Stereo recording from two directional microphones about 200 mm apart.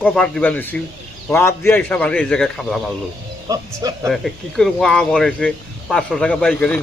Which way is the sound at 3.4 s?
15° right (ahead or behind).